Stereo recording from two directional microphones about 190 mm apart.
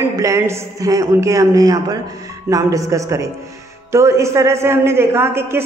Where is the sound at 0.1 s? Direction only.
15° right (ahead or behind).